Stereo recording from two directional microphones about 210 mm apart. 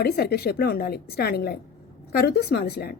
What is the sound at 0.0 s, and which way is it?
A woman's voice, 50° left (ahead or behind).